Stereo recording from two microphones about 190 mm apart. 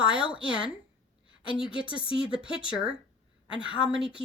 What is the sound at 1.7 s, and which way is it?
Speech, 25° left (ahead or behind).